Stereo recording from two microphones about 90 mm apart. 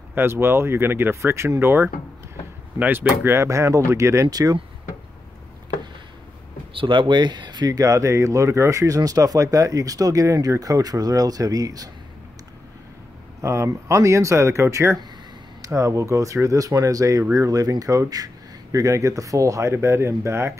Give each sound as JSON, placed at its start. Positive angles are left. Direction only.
{"t": 0.1, "sound": "speech", "side_deg": -25}
{"t": 6.7, "sound": "speech", "side_deg": -70}
{"t": 13.4, "sound": "speech", "side_deg": -30}